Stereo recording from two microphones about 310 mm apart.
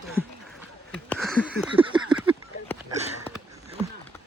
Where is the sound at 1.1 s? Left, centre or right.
Centre.